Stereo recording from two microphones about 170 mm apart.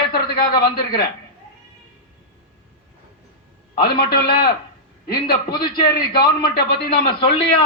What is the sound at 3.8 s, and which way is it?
A man's voice, 65° left (ahead or behind).